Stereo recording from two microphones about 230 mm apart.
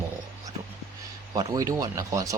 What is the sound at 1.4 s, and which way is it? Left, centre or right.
Speech, centre.